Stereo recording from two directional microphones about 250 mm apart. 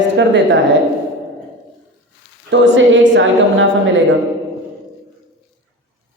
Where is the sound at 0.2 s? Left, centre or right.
Right.